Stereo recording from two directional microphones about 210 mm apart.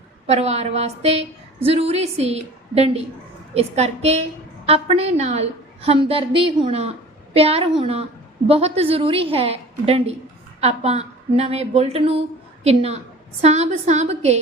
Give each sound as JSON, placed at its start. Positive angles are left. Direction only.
{"t": 0.3, "sound": "a woman's voice", "side_deg": -30}